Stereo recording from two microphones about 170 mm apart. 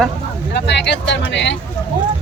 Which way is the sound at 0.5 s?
90° left.